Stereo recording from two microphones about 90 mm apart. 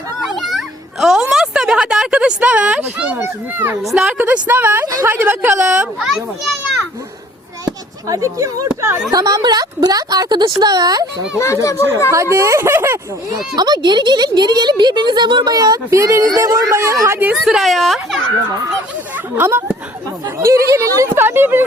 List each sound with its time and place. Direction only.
0.2 s a sound: centre (ahead or behind)
3.2 s a woman's voice: 25° right (ahead or behind)
3.8 s a woman's voice: 5° right (ahead or behind)
4.2 s a woman's voice: 20° right (ahead or behind)
7.6 s a sound: 40° right (ahead or behind)
8.8 s a woman's voice: 35° right (ahead or behind)
11.3 s speech: 35° left (ahead or behind)
12.1 s speech: 30° right (ahead or behind)
13.6 s speech: 55° right (ahead or behind)
15.5 s speech: 40° right (ahead or behind)
17.3 s speech: 5° right (ahead or behind)
19.1 s speech: 25° right (ahead or behind)
20.4 s speech: 35° right (ahead or behind)